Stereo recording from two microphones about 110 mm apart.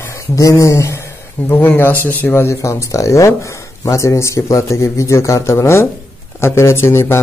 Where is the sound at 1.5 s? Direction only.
15° left (ahead or behind).